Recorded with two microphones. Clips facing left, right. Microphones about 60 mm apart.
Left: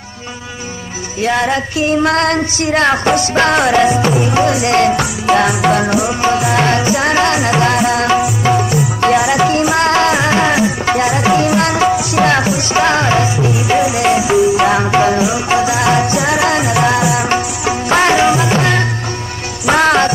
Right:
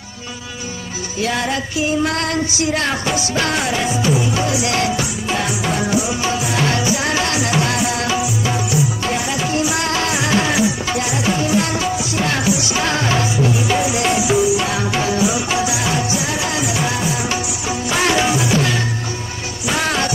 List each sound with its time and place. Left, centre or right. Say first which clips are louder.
1.2 s music: left 6 dB; left
1.9 s music: left 7 dB; left
5.2 s music: left 13 dB; left
11.3 s music: left 6 dB; left
12.3 s music: left 5 dB; left
15.8 s music: left 7 dB; left
17.0 s music: left 7 dB; left
17.9 s music: left 6 dB; left